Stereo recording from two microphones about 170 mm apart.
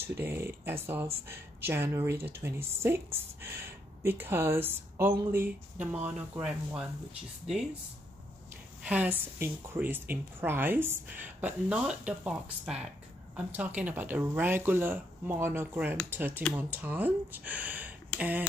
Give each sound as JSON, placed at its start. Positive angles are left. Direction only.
{"t": 0.2, "sound": "speech", "side_deg": -15}
{"t": 8.8, "sound": "speech", "side_deg": -10}